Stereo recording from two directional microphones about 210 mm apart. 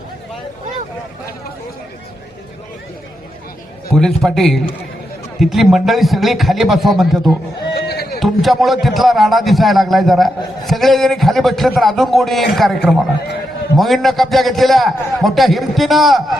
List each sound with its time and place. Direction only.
3.9 s a man's voice: centre (ahead or behind)
7.7 s a sound: 50° left (ahead or behind)
8.2 s a man's voice: centre (ahead or behind)